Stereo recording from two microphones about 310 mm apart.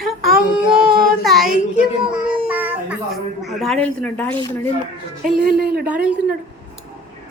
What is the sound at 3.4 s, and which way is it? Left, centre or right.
A woman's voice, centre.